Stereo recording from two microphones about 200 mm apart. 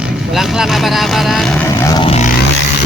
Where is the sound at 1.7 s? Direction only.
15° left (ahead or behind).